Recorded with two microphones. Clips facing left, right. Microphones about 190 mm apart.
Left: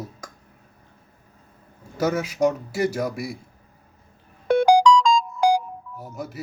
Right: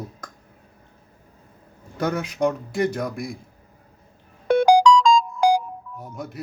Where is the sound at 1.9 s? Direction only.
5° left (ahead or behind).